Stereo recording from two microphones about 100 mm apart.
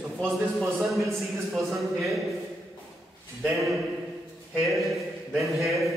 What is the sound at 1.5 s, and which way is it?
Speech, centre (ahead or behind).